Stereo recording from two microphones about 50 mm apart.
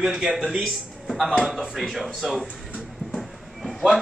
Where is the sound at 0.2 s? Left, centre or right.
Centre.